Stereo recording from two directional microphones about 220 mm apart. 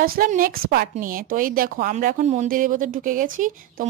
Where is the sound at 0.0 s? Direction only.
40° right (ahead or behind).